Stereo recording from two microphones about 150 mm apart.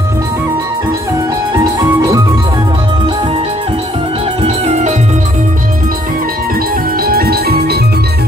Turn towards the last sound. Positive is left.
turn(degrees=-90)